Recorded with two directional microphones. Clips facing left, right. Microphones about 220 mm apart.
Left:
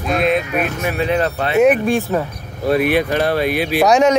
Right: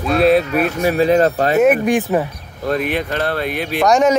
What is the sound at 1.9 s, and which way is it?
Speech, 15° right (ahead or behind).